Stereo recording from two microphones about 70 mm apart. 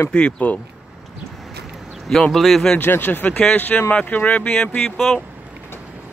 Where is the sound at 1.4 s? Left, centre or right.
Centre.